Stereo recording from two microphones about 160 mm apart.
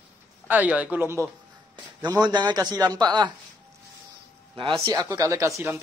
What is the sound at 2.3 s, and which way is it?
A man's voice, 25° right (ahead or behind).